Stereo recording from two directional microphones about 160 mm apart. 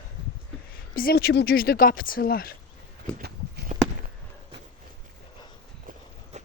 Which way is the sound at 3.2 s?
85° right.